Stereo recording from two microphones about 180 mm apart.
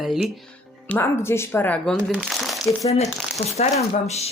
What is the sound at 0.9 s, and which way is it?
Speech, 10° left (ahead or behind).